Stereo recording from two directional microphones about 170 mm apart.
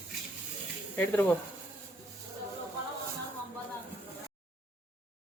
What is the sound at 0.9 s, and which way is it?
Speech, 10° left (ahead or behind).